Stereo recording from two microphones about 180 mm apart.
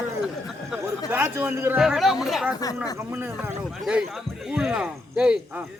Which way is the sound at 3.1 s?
10° right (ahead or behind).